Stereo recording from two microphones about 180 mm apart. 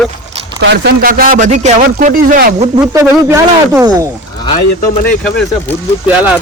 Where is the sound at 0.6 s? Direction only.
70° right (ahead or behind); by 1.8 s 40° right (ahead or behind).